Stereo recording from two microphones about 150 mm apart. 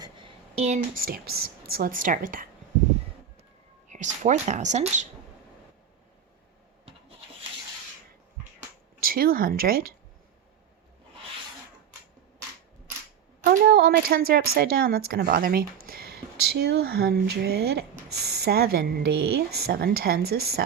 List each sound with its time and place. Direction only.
0.0 s a sound: 35° right (ahead or behind)
0.9 s speech: 80° right; by 2.5 s 65° right (ahead or behind)
3.8 s a woman's voice: 55° right (ahead or behind)
9.0 s speech: 75° right (ahead or behind)
13.4 s a woman's voice: 80° right